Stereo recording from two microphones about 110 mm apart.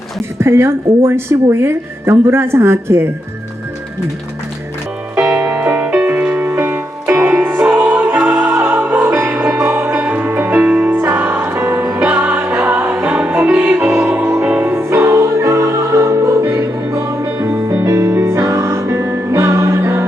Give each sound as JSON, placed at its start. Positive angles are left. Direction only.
{"t": 0.3, "sound": "speech", "side_deg": -20}
{"t": 5.1, "sound": "music", "side_deg": -5}